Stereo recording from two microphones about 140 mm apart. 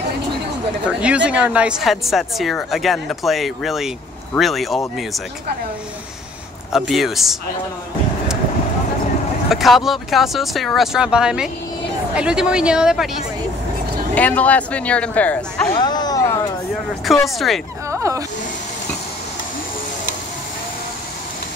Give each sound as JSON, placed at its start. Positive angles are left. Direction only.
{"t": 0.8, "sound": "speech", "side_deg": -10}
{"t": 6.7, "sound": "speech", "side_deg": 0}
{"t": 9.5, "sound": "speech", "side_deg": 0}
{"t": 14.1, "sound": "speech", "side_deg": 10}
{"t": 15.7, "sound": "a sound", "side_deg": 30}
{"t": 17.9, "sound": "a sound", "side_deg": -20}